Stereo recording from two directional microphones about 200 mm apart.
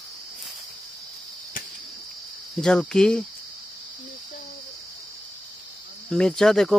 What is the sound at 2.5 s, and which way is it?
Speech, 5° left (ahead or behind).